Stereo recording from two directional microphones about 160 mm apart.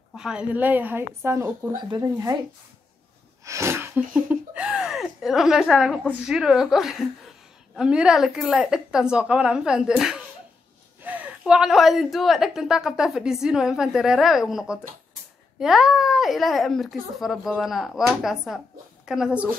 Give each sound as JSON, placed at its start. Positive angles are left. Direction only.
{"t": 0.1, "sound": "a woman's voice", "side_deg": -5}
{"t": 3.4, "sound": "a woman's voice", "side_deg": -15}